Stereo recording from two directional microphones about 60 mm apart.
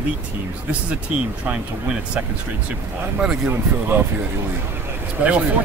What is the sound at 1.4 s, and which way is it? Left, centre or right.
Speech, centre.